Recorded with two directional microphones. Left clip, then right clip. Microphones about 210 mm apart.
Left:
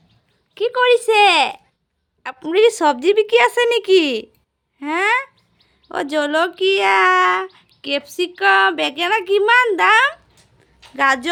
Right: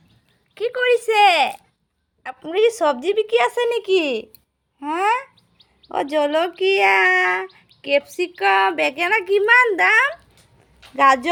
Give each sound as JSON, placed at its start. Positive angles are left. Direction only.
{"t": 0.5, "sound": "a woman's voice", "side_deg": 10}